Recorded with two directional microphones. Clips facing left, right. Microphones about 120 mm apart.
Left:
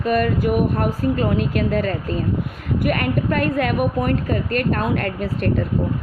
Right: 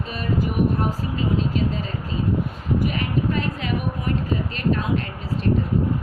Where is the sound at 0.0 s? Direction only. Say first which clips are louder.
Left 7 dB; 60° left (ahead or behind).